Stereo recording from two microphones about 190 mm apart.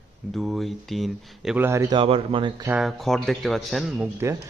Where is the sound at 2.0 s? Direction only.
30° right (ahead or behind).